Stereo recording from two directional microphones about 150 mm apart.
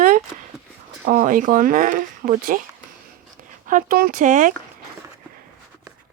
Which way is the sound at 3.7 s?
65° right (ahead or behind).